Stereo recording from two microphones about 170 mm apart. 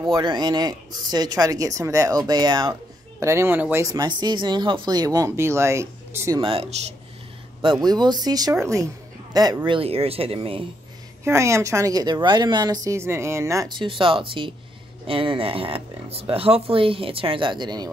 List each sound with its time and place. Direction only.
0.0 s a woman's voice: 25° right (ahead or behind)
6.4 s speech: 35° right (ahead or behind)
7.8 s a woman's voice: 25° right (ahead or behind)
9.7 s speech: 35° right (ahead or behind)
11.2 s a woman's voice: 15° right (ahead or behind)